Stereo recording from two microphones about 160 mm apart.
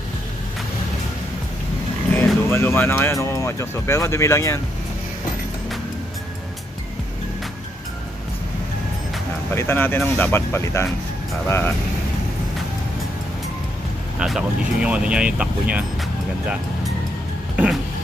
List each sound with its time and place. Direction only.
2.1 s speech: 15° left (ahead or behind)
9.5 s speech: 15° left (ahead or behind)
14.2 s speech: 5° right (ahead or behind)